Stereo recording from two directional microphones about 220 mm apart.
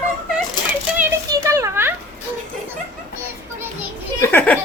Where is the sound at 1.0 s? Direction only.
10° right (ahead or behind).